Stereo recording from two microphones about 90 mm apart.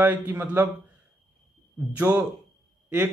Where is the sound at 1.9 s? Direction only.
20° right (ahead or behind).